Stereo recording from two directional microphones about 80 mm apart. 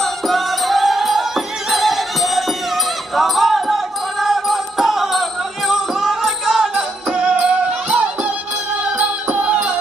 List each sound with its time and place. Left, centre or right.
0.0 s music: centre